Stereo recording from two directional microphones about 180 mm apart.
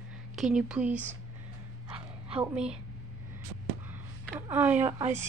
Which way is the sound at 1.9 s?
35° right (ahead or behind).